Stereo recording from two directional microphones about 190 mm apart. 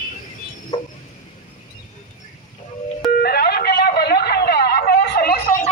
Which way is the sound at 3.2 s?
55° left (ahead or behind).